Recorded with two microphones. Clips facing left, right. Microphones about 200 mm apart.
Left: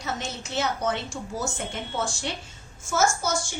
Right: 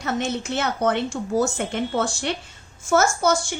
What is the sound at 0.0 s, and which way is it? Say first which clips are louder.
A woman's voice: right 8 dB; 60° right (ahead or behind).